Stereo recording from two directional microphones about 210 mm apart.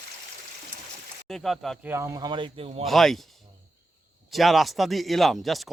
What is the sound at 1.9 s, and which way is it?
Speech, 15° right (ahead or behind).